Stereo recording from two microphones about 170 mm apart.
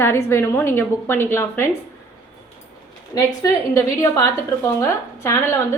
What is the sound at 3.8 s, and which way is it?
A woman's voice, 15° left (ahead or behind).